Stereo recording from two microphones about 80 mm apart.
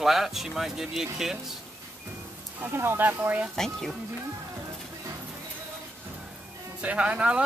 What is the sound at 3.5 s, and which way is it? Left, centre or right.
Speech, centre.